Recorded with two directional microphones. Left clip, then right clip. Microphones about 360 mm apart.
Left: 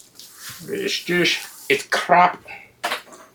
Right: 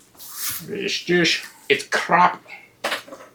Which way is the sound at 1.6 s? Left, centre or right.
Left.